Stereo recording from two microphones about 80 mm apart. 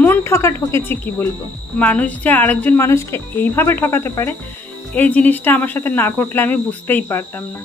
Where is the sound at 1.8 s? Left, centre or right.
Centre.